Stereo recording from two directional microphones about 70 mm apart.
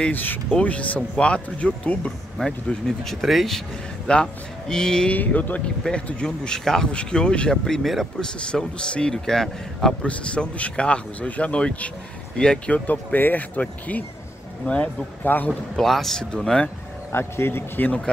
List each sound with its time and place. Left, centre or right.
0.1 s speech: left
2.3 s speech: centre
5.1 s speech: left
15.2 s speech: left
15.7 s speech: centre
17.1 s a man's voice: left